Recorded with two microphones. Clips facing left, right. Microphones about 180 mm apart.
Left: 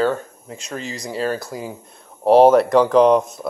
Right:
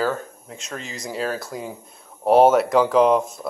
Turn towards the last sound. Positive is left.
turn(degrees=0)  # may be behind; listen again after turning